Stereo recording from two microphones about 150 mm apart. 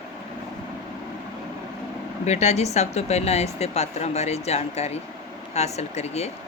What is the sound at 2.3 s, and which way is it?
Speech, 45° left (ahead or behind).